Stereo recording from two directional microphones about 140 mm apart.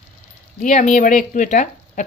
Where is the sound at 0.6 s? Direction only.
60° left (ahead or behind).